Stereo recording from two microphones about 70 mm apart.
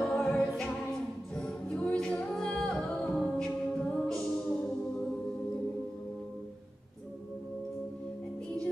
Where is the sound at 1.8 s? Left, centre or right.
Centre.